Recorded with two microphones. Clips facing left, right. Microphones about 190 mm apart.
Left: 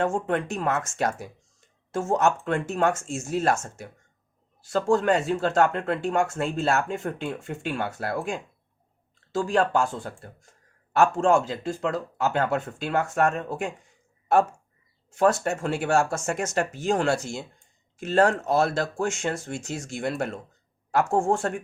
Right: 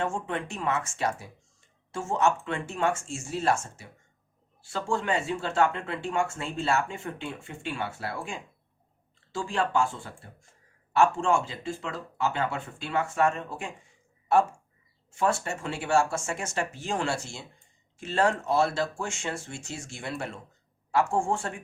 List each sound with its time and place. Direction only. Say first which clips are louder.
0.0 s speech: left 6 dB; 45° left (ahead or behind)
9.3 s speech: left 5 dB; 40° left (ahead or behind)
15.6 s speech: left 2 dB; 45° left (ahead or behind)